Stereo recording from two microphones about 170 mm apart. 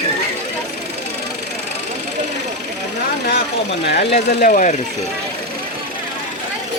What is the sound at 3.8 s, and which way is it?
Speech, 70° left (ahead or behind).